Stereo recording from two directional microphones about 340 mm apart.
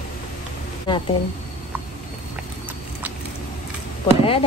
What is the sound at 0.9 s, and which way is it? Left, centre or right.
Speech, centre.